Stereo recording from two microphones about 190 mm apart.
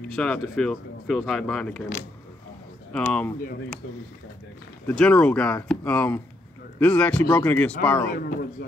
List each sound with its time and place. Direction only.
0.1 s speech: 5° left (ahead or behind)
2.9 s speech: 5° left (ahead or behind)
4.8 s speech: 5° left (ahead or behind)
8.1 s a man's voice: 55° left (ahead or behind)